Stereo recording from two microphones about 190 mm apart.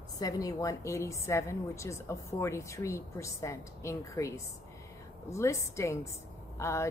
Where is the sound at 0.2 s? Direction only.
20° left (ahead or behind).